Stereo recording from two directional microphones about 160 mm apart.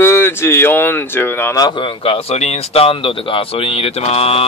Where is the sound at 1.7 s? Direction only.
30° left (ahead or behind).